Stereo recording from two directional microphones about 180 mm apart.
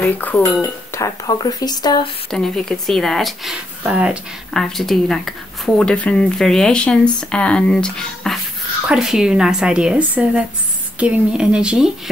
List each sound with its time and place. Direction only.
0.0 s speech: 10° left (ahead or behind)
2.3 s speech: centre (ahead or behind)